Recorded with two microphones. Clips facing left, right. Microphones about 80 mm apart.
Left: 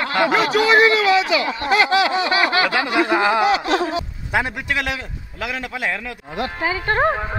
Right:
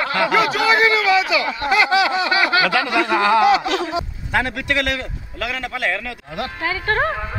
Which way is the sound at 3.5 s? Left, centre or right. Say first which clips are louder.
Even; left.